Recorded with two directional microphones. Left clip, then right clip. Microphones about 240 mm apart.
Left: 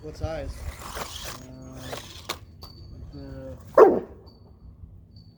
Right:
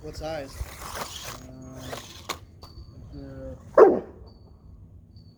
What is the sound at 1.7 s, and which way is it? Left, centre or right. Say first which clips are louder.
Music: left 1 dB; centre.